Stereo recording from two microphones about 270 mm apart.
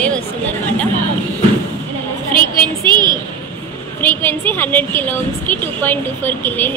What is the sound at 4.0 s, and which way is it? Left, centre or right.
A woman's voice, centre.